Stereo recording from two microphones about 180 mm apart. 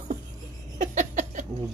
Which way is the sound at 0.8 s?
45° right (ahead or behind).